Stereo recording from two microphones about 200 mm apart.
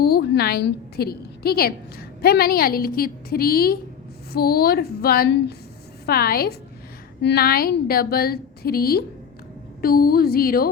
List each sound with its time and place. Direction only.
0.0 s a woman's voice: 50° left (ahead or behind)